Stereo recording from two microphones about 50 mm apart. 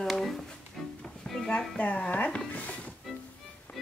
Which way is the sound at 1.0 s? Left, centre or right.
Centre.